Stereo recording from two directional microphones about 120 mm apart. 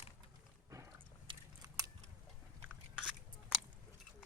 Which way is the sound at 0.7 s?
25° right (ahead or behind).